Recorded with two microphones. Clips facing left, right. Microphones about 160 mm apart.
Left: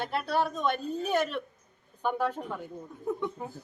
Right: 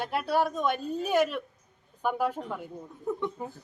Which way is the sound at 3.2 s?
5° left (ahead or behind).